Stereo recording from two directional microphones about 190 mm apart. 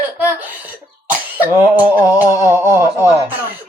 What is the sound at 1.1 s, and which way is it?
Throat clearing, 10° right (ahead or behind).